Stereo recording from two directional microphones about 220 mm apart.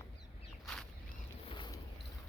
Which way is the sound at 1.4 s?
20° left (ahead or behind).